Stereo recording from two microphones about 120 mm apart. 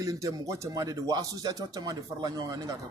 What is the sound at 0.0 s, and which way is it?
Speech, 30° right (ahead or behind).